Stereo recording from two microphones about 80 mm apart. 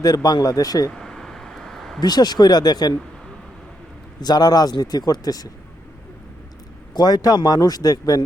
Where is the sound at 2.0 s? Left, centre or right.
Left.